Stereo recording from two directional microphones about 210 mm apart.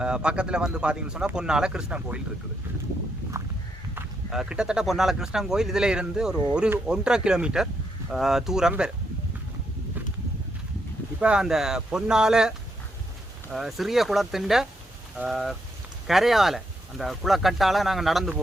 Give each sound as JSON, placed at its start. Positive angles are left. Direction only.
{"t": 0.0, "sound": "speech", "side_deg": -5}
{"t": 3.3, "sound": "walk", "side_deg": -15}
{"t": 3.9, "sound": "speech", "side_deg": -5}
{"t": 11.2, "sound": "speech", "side_deg": -5}